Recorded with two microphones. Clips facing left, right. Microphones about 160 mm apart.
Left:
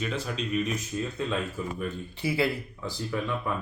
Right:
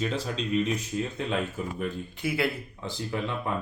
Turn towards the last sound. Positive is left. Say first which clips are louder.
# even
turn(degrees=-25)  # may be behind; listen again after turning